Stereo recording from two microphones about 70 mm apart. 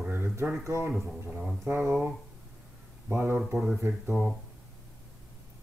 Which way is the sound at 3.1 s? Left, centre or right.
Right.